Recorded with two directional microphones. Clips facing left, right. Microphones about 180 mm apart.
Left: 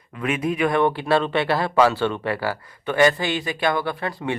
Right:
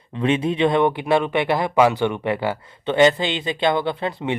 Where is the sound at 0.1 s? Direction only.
25° right (ahead or behind).